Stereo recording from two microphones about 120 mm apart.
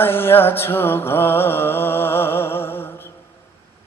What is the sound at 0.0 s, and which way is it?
Music, 20° left (ahead or behind).